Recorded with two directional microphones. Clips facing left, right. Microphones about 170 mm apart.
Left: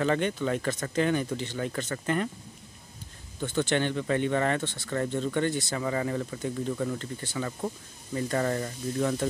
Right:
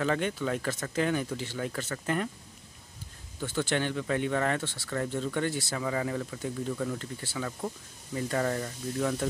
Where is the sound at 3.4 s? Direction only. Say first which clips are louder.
Left 3 dB; 5° right (ahead or behind).